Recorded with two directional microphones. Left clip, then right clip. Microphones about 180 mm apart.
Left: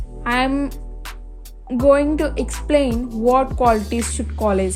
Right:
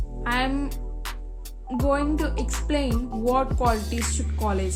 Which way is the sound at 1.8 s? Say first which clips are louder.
Left 10 dB; 45° left (ahead or behind).